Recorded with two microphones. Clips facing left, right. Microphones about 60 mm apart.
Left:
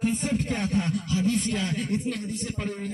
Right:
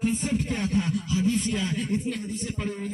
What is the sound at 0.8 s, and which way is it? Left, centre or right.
A man's voice, left.